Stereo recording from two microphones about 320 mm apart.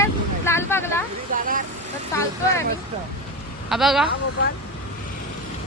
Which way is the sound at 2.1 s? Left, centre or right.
Centre.